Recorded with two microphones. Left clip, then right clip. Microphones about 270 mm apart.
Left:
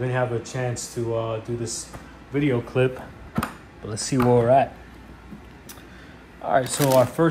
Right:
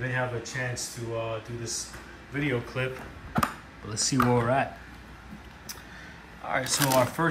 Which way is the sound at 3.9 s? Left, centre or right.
Centre.